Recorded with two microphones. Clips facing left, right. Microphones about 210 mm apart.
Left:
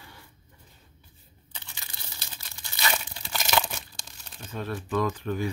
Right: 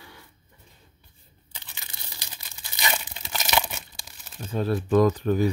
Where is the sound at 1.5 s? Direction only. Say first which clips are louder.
Even; 15° right (ahead or behind).